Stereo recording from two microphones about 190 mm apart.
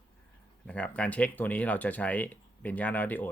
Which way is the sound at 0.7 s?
5° left (ahead or behind).